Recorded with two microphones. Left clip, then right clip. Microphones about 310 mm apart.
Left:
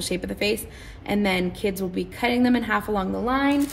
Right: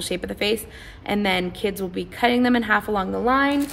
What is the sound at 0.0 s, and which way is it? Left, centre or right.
A woman's voice, right.